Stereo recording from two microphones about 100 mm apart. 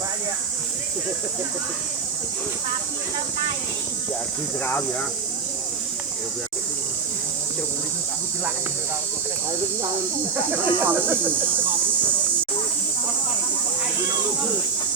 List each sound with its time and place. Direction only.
4.6 s speech: 20° left (ahead or behind)
10.5 s speech: 20° right (ahead or behind)